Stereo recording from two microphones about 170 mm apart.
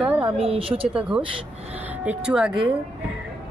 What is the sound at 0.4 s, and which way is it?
Speech, 35° right (ahead or behind).